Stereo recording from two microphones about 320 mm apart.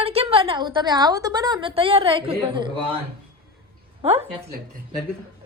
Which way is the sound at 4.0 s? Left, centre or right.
Centre.